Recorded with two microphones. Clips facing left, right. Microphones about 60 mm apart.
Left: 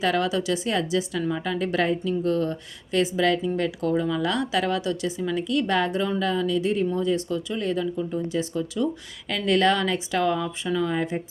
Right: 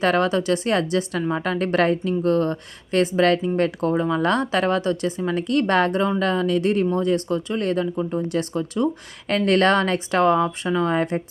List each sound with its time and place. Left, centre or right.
0.0 s speech: right
4.2 s speech: right